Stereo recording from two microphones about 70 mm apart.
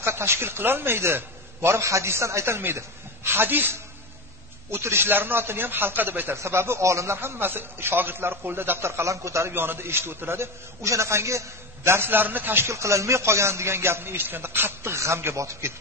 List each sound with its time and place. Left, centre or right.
0.0 s a man's voice: right
9.5 s a man's voice: right